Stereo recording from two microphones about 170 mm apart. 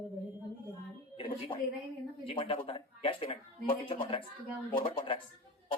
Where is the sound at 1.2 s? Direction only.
30° left (ahead or behind).